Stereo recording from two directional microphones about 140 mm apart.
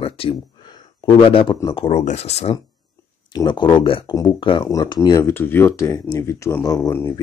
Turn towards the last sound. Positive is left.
turn(degrees=20)  # may be behind; listen again after turning